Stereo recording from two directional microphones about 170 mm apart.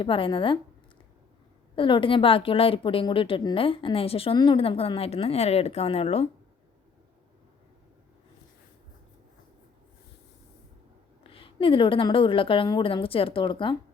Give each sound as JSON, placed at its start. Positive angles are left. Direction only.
{"t": 0.0, "sound": "a woman's voice", "side_deg": 30}
{"t": 1.7, "sound": "a woman's voice", "side_deg": 30}
{"t": 11.2, "sound": "a woman's voice", "side_deg": 30}